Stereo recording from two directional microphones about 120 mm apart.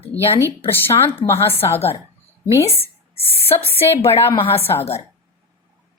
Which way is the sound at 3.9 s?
55° left (ahead or behind).